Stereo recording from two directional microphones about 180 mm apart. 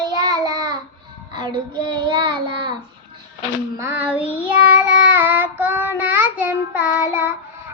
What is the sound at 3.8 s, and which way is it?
Child singing, 10° right (ahead or behind).